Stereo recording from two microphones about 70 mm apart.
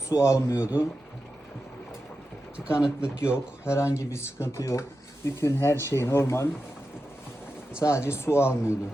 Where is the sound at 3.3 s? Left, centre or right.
Left.